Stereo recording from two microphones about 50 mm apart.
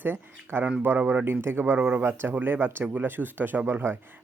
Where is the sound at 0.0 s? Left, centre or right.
Right.